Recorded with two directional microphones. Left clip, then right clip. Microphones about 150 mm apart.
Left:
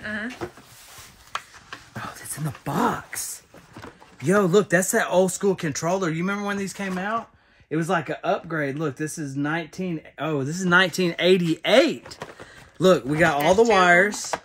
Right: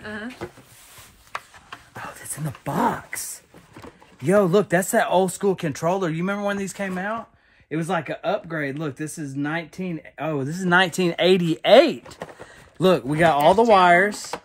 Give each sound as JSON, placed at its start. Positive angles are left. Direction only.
{"t": 0.0, "sound": "speech", "side_deg": -5}
{"t": 1.7, "sound": "a sound", "side_deg": -25}
{"t": 2.3, "sound": "speech", "side_deg": 0}
{"t": 2.8, "sound": "speech", "side_deg": -30}
{"t": 4.4, "sound": "speech", "side_deg": -20}
{"t": 5.5, "sound": "speech", "side_deg": -90}
{"t": 7.7, "sound": "speech", "side_deg": 0}
{"t": 10.1, "sound": "speech", "side_deg": -15}
{"t": 10.8, "sound": "speech", "side_deg": -90}
{"t": 11.1, "sound": "a man's voice", "side_deg": -30}